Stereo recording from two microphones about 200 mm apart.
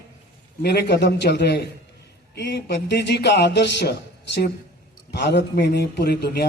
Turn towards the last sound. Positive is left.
turn(degrees=55)  # may be behind; listen again after turning